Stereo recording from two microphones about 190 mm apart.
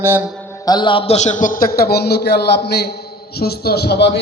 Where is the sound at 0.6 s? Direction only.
25° left (ahead or behind).